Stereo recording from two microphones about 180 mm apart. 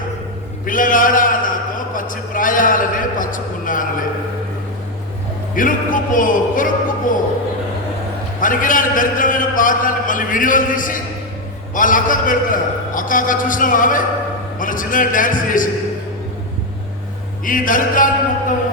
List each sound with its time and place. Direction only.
0.6 s a sound: 50° left (ahead or behind)
2.0 s a man's voice: 50° left (ahead or behind)
5.5 s a man's voice: 50° left (ahead or behind)
8.4 s a man's voice: 50° left (ahead or behind)
17.4 s a man's voice: 50° left (ahead or behind)